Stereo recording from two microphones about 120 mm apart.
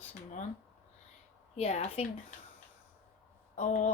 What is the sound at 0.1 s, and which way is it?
Speech, 90° left.